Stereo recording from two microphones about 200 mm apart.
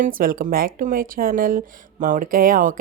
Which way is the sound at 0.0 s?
45° right (ahead or behind).